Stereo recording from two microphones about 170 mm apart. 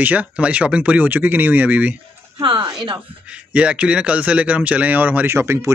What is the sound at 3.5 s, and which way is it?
A man's voice, 5° right (ahead or behind).